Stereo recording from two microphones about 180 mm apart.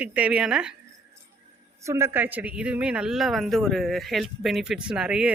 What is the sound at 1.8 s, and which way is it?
A woman's voice, 15° right (ahead or behind).